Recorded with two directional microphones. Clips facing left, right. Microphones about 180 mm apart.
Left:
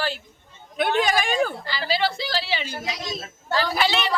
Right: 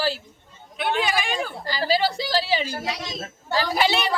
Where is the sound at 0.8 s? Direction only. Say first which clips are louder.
Left 3 dB; 45° left (ahead or behind).